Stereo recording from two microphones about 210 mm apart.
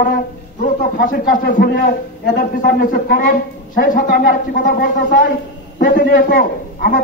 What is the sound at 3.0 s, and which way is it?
A woman's voice, 40° left (ahead or behind).